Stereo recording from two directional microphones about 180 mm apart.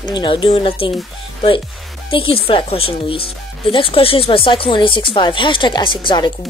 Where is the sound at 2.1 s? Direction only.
30° left (ahead or behind).